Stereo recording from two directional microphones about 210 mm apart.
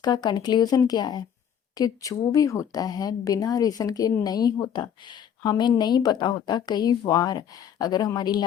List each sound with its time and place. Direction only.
0.0 s speech: 20° left (ahead or behind)